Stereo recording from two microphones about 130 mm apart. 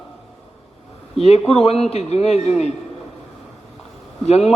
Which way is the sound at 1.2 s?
50° left (ahead or behind).